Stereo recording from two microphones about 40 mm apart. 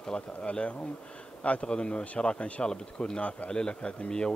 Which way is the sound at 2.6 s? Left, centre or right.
Centre.